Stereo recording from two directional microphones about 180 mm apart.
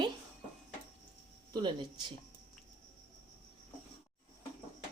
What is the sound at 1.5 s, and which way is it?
Speech, 25° right (ahead or behind).